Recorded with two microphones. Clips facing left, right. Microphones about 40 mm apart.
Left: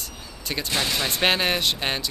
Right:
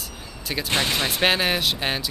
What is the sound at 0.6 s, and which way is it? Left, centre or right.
Speech, right.